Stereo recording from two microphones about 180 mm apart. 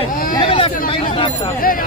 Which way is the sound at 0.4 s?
30° left (ahead or behind).